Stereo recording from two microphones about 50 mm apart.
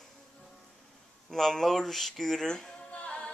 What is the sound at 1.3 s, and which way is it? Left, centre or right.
Speech, centre.